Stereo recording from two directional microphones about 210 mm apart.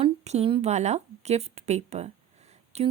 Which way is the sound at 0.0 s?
30° right (ahead or behind).